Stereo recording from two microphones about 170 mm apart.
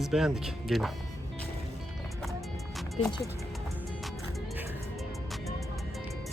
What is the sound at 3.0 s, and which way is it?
Speech, 40° left (ahead or behind).